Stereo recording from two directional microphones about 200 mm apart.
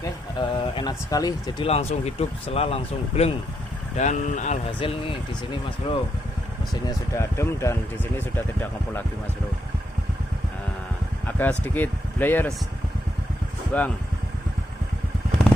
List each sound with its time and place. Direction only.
0.0 s speech: 25° left (ahead or behind)
6.8 s speech: 15° left (ahead or behind)
11.3 s speech: 10° left (ahead or behind)
13.7 s speech: 10° left (ahead or behind)